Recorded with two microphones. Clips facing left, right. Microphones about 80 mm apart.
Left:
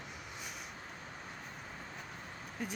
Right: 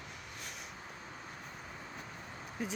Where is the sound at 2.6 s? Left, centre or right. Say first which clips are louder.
Right 2 dB; centre.